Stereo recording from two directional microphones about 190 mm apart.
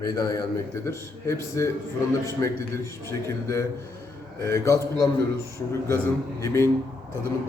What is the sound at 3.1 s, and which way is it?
A man's voice, 15° left (ahead or behind).